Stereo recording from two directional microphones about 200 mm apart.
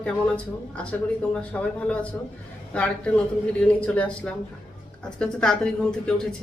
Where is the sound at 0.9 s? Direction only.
5° left (ahead or behind).